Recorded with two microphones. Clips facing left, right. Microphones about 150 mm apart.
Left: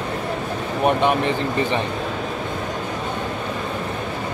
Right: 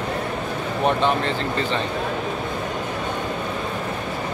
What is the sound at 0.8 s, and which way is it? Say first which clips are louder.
Speech: left 2 dB; 15° left (ahead or behind).